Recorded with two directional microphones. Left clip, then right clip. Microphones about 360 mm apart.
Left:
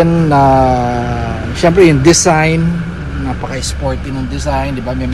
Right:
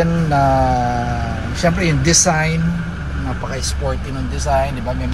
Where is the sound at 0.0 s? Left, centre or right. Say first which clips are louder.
Left 6 dB; centre.